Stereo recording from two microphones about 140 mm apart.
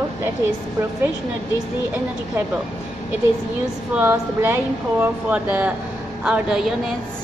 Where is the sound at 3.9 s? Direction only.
15° right (ahead or behind).